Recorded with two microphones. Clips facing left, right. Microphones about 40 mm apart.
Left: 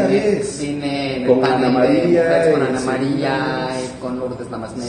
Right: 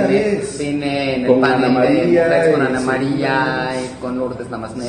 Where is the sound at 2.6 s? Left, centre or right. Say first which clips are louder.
Right 2 dB; centre.